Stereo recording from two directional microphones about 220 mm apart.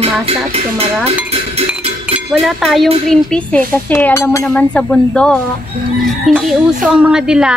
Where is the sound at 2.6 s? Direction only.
Centre (ahead or behind).